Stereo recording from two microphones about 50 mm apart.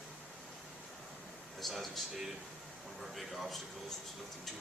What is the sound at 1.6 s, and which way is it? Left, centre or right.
Speech, centre.